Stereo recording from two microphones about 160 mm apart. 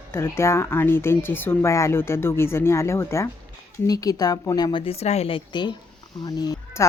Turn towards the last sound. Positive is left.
turn(degrees=25)  # may be behind; listen again after turning